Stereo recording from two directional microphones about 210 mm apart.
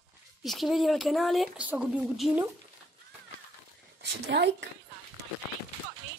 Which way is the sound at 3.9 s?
55° right (ahead or behind).